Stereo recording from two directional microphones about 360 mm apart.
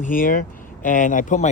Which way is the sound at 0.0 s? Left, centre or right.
Left.